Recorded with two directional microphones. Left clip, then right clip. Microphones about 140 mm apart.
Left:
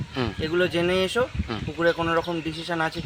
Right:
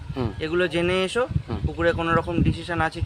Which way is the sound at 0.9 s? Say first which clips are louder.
Even; 30° right (ahead or behind).